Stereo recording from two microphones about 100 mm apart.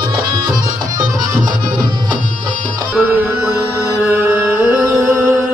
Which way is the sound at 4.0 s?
25° right (ahead or behind).